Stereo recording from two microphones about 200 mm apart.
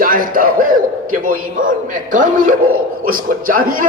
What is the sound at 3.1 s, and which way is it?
Speech, 45° right (ahead or behind).